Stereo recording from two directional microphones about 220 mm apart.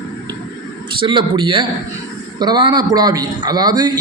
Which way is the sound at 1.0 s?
20° right (ahead or behind).